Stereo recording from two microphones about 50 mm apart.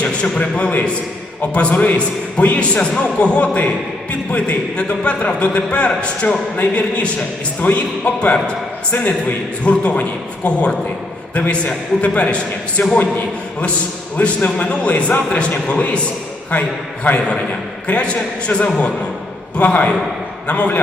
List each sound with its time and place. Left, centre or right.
0.0 s a man's voice: left
14.2 s a man's voice: left